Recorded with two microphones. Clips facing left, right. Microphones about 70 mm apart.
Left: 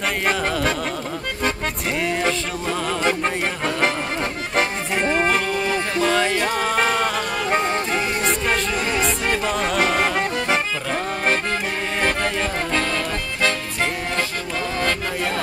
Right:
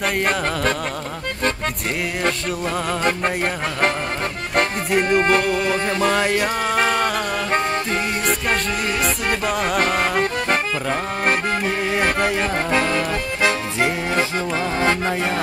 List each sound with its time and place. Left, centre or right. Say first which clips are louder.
0.0 s music: right 1 dB; centre
2.9 s music: even; centre
4.6 s music: right 3 dB; centre